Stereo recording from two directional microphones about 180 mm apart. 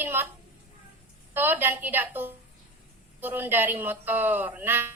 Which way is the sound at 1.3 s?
10° right (ahead or behind).